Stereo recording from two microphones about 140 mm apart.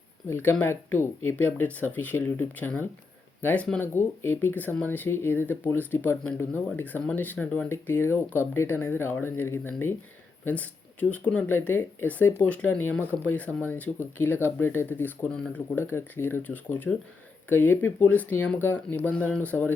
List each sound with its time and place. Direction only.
0.3 s speech: 15° left (ahead or behind)